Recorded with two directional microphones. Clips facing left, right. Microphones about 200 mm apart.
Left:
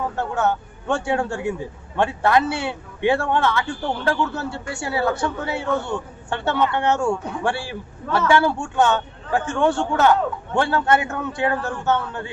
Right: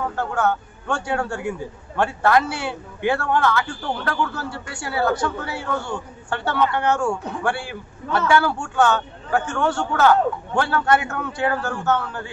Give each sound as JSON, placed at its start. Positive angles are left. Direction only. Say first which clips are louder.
{"t": 0.1, "sound": "a man's voice", "louder": "even", "side_deg": 25}